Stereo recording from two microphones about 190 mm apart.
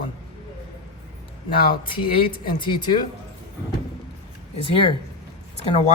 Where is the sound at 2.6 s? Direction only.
25° left (ahead or behind).